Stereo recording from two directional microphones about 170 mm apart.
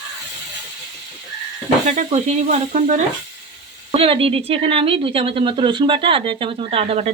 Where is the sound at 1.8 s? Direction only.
45° right (ahead or behind).